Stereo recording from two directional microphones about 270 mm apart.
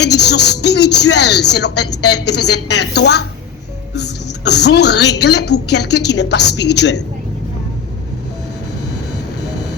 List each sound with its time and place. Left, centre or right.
0.0 s speech: left